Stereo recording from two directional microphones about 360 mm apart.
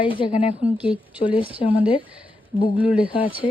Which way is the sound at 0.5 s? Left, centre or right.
Centre.